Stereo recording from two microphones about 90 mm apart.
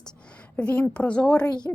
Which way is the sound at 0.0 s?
10° left (ahead or behind).